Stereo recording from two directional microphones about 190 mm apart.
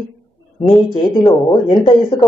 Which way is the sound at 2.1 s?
20° left (ahead or behind).